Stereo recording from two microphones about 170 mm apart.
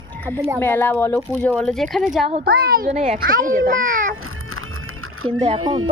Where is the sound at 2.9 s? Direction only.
45° right (ahead or behind).